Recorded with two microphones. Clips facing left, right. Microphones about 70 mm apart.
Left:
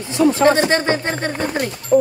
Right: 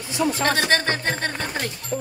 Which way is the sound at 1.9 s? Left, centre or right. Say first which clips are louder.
Left 16 dB; left.